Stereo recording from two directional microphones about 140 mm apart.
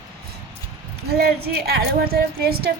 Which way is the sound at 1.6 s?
90° right.